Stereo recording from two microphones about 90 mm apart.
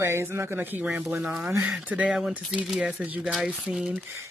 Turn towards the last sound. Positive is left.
turn(degrees=-5)  # may be behind; listen again after turning